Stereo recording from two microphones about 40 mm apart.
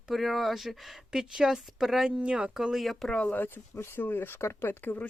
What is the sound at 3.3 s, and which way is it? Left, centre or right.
Speech, left.